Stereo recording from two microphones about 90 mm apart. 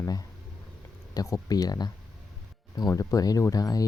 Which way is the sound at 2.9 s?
35° left (ahead or behind).